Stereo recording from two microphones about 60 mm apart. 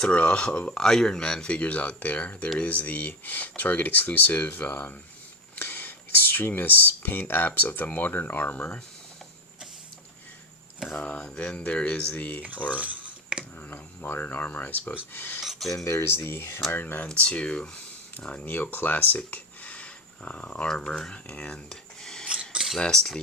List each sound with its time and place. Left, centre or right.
0.0 s speech: centre
11.0 s speech: centre
12.7 s cutlery: right
13.6 s speech: left
15.4 s a sound: centre
15.7 s speech: left
16.0 s speech: left
16.7 s speech: left
17.2 s speech: centre
22.3 s mechanisms: centre
22.8 s speech: centre